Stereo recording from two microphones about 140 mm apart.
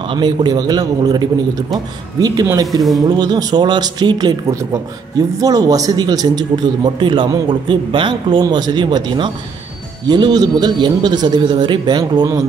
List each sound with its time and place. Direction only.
0.0 s a man's voice: 35° right (ahead or behind)